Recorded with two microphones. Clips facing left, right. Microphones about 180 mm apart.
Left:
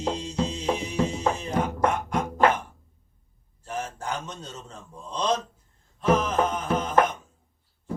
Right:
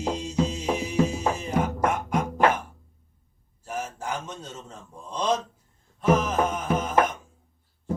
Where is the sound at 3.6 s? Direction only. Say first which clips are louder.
Even; 5° right (ahead or behind).